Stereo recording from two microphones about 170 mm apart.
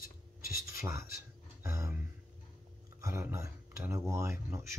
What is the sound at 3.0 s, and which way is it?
Speech, 15° right (ahead or behind).